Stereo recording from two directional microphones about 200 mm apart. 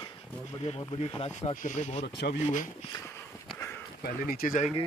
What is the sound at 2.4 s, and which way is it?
Speech, 40° left (ahead or behind).